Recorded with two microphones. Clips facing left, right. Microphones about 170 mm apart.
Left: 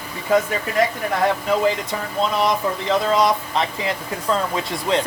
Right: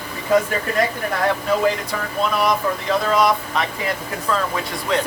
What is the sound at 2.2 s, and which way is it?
Speech, 20° left (ahead or behind).